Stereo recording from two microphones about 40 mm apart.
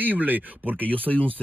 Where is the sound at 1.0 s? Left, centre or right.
Left.